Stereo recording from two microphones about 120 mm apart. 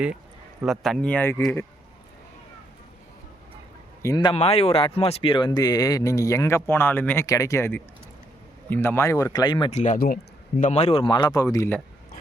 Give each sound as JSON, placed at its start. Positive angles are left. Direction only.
{"t": 0.6, "sound": "speech", "side_deg": 0}
{"t": 1.1, "sound": "speech", "side_deg": 20}
{"t": 4.0, "sound": "speech", "side_deg": 25}
{"t": 4.4, "sound": "speech", "side_deg": 60}
{"t": 7.3, "sound": "speech", "side_deg": 25}
{"t": 9.6, "sound": "speech", "side_deg": 80}
{"t": 10.6, "sound": "a man's voice", "side_deg": 70}
{"t": 11.1, "sound": "speech", "side_deg": 35}